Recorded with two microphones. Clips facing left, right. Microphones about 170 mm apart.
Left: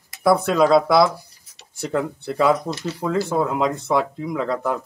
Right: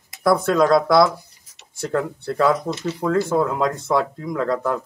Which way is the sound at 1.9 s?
5° left (ahead or behind).